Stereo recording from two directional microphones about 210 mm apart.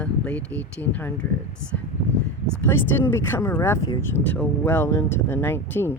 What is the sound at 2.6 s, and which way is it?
Speech, 10° left (ahead or behind).